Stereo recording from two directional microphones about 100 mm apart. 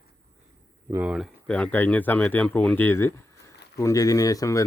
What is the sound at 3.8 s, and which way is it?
Speech, 35° left (ahead or behind).